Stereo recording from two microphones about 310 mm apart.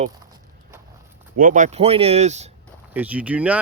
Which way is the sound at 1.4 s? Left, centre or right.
Right.